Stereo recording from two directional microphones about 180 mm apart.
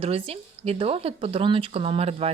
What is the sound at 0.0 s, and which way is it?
Speech, 35° right (ahead or behind).